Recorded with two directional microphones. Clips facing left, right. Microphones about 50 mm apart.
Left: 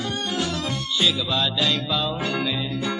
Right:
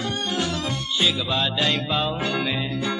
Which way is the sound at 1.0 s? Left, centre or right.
Right.